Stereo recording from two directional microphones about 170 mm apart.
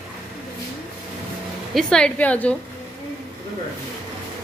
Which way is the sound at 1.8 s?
5° left (ahead or behind).